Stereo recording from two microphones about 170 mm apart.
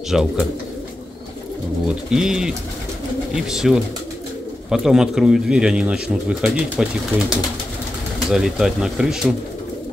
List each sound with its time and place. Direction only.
0.1 s speech: 5° right (ahead or behind)
1.9 s speech: 5° right (ahead or behind)